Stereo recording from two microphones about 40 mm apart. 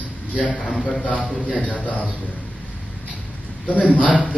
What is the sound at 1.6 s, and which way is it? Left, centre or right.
Speech, left.